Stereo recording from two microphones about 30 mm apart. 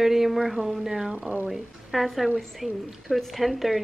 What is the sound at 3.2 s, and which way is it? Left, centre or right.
Speech, centre.